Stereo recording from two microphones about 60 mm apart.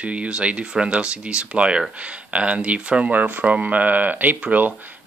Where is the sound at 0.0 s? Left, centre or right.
Right.